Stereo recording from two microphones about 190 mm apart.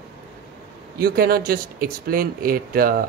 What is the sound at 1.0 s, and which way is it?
Speech, 50° right (ahead or behind).